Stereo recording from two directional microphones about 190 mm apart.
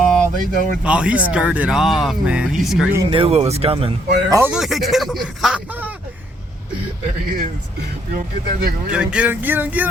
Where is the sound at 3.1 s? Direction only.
30° right (ahead or behind).